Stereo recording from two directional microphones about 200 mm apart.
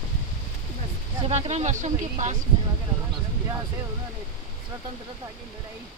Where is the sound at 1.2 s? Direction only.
30° right (ahead or behind).